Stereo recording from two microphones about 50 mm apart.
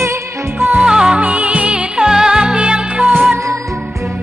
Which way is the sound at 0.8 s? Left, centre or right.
Centre.